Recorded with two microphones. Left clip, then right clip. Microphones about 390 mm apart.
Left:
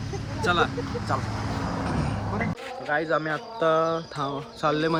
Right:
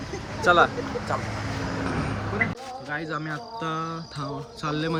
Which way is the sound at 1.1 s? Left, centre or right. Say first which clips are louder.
Even; centre.